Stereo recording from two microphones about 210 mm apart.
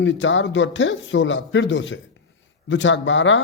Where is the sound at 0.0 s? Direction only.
60° left (ahead or behind).